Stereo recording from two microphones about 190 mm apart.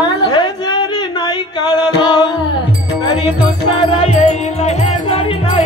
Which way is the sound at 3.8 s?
30° left (ahead or behind).